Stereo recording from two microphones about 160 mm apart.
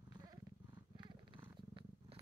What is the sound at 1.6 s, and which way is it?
Cat, 35° right (ahead or behind).